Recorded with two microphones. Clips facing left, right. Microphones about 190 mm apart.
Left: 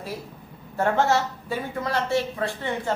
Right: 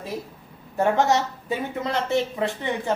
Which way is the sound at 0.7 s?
15° right (ahead or behind).